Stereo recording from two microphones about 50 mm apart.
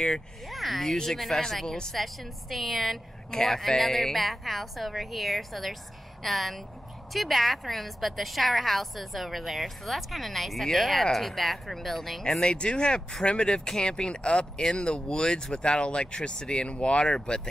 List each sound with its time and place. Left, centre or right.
0.5 s a woman's voice: centre